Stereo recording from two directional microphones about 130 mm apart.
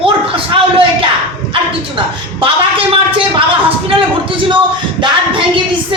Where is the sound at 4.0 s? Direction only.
40° right (ahead or behind).